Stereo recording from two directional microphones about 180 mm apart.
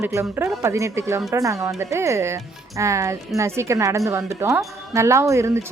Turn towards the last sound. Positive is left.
turn(degrees=-15)  # may be behind; listen again after turning